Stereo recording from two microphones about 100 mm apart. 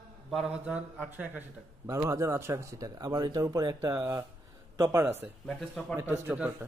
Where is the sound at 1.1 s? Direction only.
20° right (ahead or behind).